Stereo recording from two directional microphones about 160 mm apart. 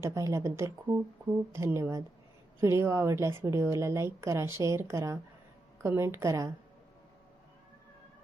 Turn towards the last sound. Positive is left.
turn(degrees=-20)  # may be behind; listen again after turning